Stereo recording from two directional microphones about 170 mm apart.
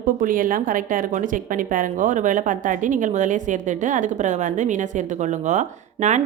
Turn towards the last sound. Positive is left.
turn(degrees=-45)  # may be behind; listen again after turning